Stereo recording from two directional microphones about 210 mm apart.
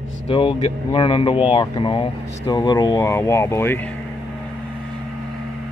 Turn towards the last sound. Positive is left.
turn(degrees=10)  # may be behind; listen again after turning